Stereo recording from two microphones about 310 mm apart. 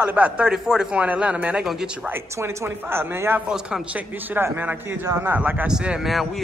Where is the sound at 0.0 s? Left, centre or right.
Centre.